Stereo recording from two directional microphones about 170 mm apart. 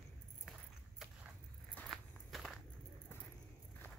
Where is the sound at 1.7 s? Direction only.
5° left (ahead or behind).